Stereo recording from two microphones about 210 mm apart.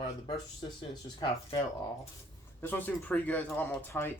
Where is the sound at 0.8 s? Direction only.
25° left (ahead or behind).